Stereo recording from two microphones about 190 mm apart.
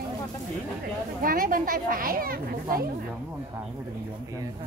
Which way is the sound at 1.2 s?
50° right (ahead or behind).